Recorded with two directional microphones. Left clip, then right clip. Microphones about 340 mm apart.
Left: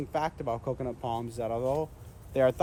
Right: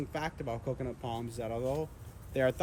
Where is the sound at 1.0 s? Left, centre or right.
Centre.